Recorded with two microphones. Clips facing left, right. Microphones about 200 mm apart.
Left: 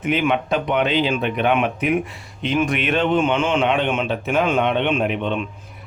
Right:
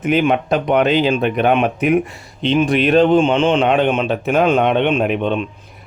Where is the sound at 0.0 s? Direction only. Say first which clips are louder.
Right 4 dB; 40° right (ahead or behind).